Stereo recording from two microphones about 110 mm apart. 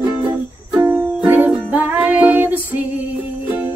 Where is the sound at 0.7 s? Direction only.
15° right (ahead or behind).